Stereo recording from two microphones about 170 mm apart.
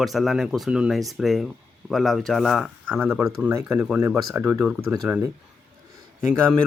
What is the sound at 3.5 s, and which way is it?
Speech, 15° right (ahead or behind).